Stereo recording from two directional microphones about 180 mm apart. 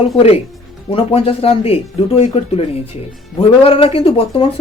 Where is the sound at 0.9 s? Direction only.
30° left (ahead or behind).